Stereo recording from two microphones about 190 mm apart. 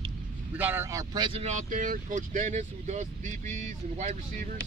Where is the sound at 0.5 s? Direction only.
10° right (ahead or behind); by 4.5 s 40° right (ahead or behind).